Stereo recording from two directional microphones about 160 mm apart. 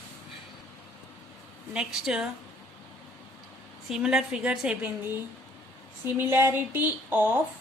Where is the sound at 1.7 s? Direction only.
5° right (ahead or behind).